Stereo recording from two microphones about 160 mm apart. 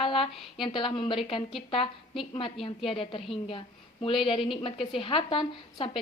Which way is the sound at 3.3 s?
35° left (ahead or behind).